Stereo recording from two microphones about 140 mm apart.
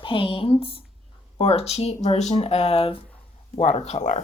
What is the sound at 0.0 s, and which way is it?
Speech, 40° left (ahead or behind).